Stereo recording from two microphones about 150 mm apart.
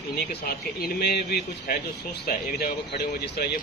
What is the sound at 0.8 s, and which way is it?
Speech, 90° left.